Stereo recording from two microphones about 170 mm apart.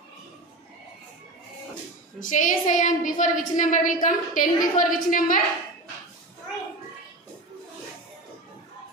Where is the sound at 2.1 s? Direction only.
50° left (ahead or behind).